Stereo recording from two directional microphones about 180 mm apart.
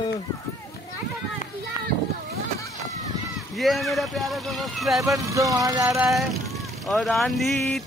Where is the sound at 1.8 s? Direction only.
25° left (ahead or behind).